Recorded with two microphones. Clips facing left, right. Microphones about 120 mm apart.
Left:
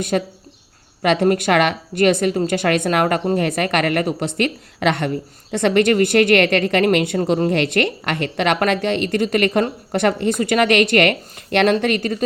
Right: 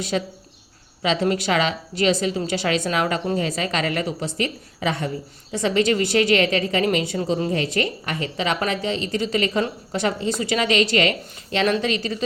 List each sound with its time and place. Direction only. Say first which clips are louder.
0.1 s a woman's voice: left 3 dB; 50° left (ahead or behind)
7.5 s a woman's voice: left 5 dB; 70° left (ahead or behind); by 12.2 s 55° left (ahead or behind)